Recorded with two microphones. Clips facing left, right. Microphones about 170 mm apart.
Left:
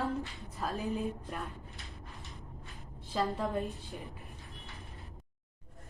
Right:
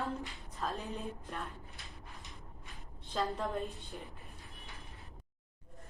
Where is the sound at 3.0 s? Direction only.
Centre (ahead or behind).